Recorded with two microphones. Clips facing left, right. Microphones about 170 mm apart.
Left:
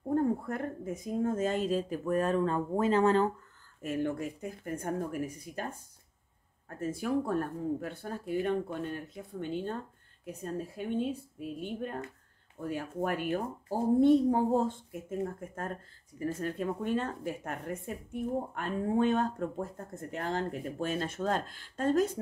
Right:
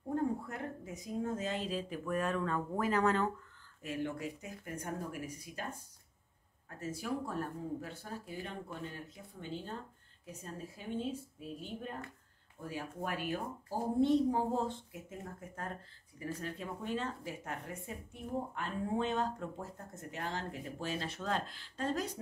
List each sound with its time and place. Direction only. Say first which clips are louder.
0.1 s speech: left 6 dB; 50° left (ahead or behind); by 3.3 s 30° left (ahead or behind)
3.8 s speech: left 6 dB; 50° left (ahead or behind)
6.8 s speech: left 7 dB; 55° left (ahead or behind)